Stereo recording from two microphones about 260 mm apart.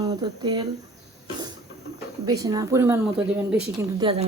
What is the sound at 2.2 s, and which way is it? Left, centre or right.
A woman's voice, centre.